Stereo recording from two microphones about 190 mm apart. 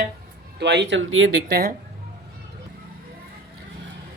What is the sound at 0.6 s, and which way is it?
Speech, 65° right (ahead or behind).